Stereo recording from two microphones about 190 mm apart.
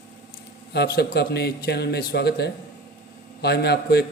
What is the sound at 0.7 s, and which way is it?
Speech, 60° left (ahead or behind).